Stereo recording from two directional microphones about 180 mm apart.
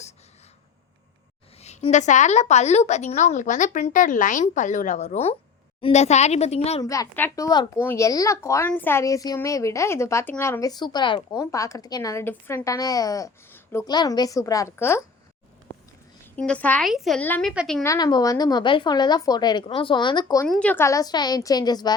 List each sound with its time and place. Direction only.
1.6 s a woman's voice: 40° left (ahead or behind)
6.8 s a woman's voice: 20° left (ahead or behind)
16.3 s speech: 5° left (ahead or behind)
17.5 s a woman's voice: centre (ahead or behind)
17.8 s a woman's voice: 20° left (ahead or behind)
20.5 s a woman's voice: 5° left (ahead or behind); by 21.9 s 20° left (ahead or behind)